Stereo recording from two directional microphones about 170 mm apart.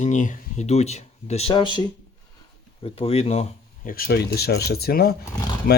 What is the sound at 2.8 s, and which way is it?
Speech, 35° left (ahead or behind).